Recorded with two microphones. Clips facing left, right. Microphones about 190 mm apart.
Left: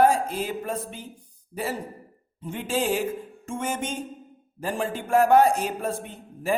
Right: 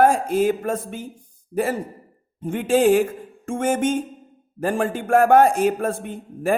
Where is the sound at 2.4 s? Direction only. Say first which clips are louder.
Right 9 dB; 55° right (ahead or behind).